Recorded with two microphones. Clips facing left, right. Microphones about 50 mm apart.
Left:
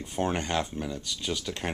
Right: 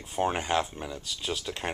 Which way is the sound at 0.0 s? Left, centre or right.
Centre.